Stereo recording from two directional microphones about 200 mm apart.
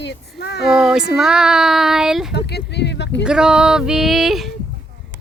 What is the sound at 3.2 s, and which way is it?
Speech, 5° right (ahead or behind).